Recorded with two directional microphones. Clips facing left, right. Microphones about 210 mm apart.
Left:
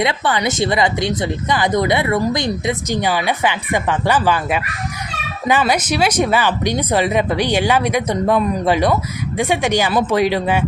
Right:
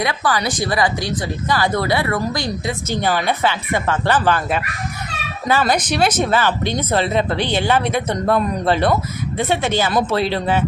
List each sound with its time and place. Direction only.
0.0 s speech: 25° left (ahead or behind)